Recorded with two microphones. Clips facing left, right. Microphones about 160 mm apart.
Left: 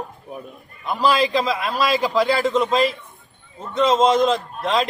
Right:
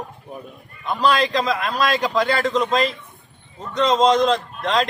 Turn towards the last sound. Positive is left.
turn(degrees=5)  # may be behind; listen again after turning